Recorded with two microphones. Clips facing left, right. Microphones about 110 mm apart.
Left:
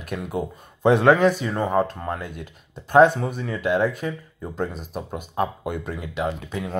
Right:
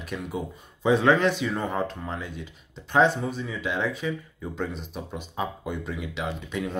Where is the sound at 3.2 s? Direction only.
60° left (ahead or behind).